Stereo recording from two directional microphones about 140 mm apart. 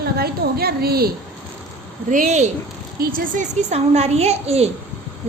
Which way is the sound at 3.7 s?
50° right (ahead or behind).